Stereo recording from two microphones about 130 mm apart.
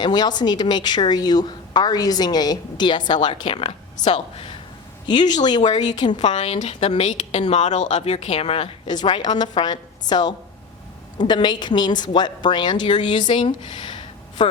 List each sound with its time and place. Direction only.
0.0 s a woman's voice: 35° left (ahead or behind)
4.0 s a woman's voice: 60° left (ahead or behind)
5.3 s a woman's voice: 35° left (ahead or behind)
6.1 s a woman's voice: 60° left (ahead or behind)
8.9 s a woman's voice: 35° left (ahead or behind)
13.3 s a sound: 40° left (ahead or behind)